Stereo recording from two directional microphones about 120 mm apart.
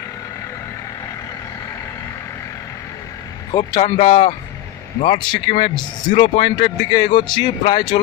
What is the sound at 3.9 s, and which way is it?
Speech, 50° left (ahead or behind).